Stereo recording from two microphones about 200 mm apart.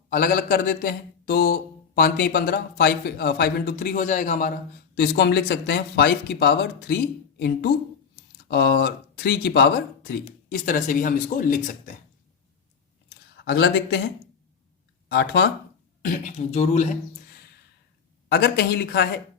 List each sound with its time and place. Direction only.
0.1 s speech: 45° left (ahead or behind)
4.9 s speech: 55° left (ahead or behind)
10.5 s speech: 40° left (ahead or behind)
13.3 s speech: 55° left (ahead or behind)
15.1 s speech: 60° left (ahead or behind)
16.0 s speech: 40° left (ahead or behind)
18.3 s speech: 55° left (ahead or behind)